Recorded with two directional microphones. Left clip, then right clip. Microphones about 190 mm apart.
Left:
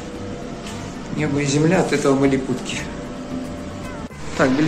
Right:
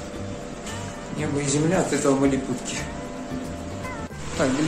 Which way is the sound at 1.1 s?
Centre (ahead or behind).